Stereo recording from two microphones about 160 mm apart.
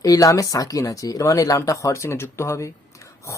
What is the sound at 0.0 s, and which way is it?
Speech, 20° left (ahead or behind).